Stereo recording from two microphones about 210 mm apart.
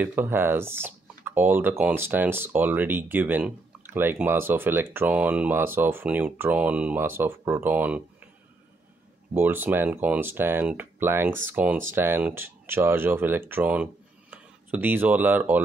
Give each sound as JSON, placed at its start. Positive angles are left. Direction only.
{"t": 0.0, "sound": "speech", "side_deg": -10}
{"t": 9.3, "sound": "speech", "side_deg": -10}